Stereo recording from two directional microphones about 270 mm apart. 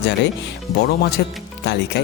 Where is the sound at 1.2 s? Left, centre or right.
Left.